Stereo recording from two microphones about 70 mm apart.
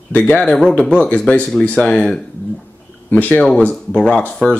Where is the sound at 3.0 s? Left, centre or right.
Left.